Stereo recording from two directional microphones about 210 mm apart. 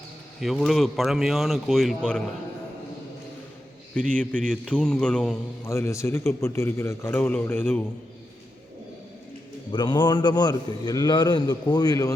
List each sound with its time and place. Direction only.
0.3 s speech: centre (ahead or behind)
3.9 s a man's voice: 5° left (ahead or behind)
9.7 s a man's voice: 20° left (ahead or behind)